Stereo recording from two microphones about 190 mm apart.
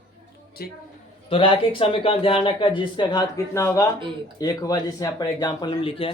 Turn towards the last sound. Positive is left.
turn(degrees=30)  # may be behind; listen again after turning